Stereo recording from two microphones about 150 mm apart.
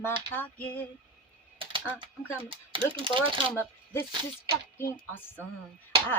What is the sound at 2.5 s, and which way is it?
Speech, 35° right (ahead or behind).